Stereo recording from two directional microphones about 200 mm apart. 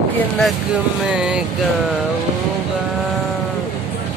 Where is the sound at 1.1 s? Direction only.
5° right (ahead or behind).